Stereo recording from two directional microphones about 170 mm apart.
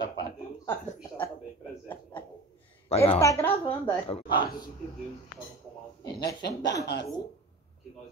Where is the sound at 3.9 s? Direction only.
30° left (ahead or behind).